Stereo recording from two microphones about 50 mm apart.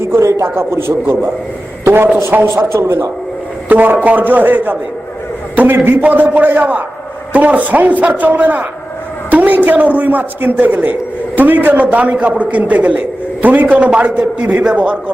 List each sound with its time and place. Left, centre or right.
0.0 s a man's voice: right
0.4 s a man's voice: right
2.7 s speech: right
3.7 s a man's voice: right
6.0 s a man's voice: right
9.3 s a sound: right
9.6 s a man's voice: right
14.8 s a man's voice: right